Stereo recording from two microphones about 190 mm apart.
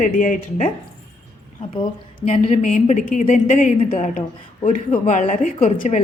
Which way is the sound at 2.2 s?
35° left (ahead or behind).